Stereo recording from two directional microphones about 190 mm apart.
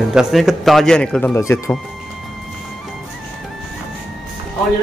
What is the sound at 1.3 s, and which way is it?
Speech, 15° left (ahead or behind).